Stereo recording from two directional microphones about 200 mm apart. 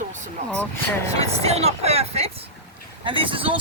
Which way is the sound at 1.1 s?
30° right (ahead or behind).